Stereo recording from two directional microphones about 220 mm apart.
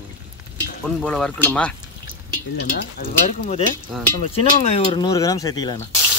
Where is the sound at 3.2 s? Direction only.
35° left (ahead or behind).